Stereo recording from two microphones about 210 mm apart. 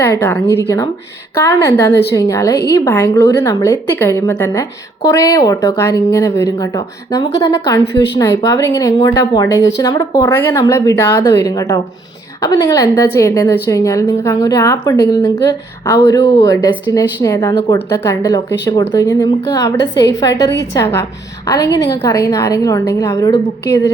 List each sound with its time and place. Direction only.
0.0 s speech: 10° left (ahead or behind)
1.5 s speech: 15° left (ahead or behind)